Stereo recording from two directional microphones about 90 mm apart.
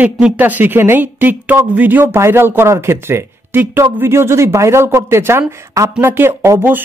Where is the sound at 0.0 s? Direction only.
15° right (ahead or behind).